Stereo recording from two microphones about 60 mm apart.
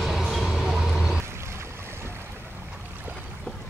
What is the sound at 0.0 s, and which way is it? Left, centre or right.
Train, centre.